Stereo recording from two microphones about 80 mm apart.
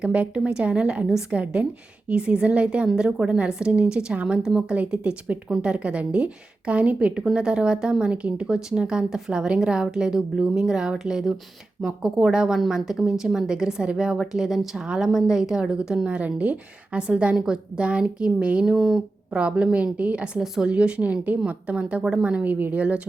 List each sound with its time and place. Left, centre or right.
0.0 s a woman's voice: centre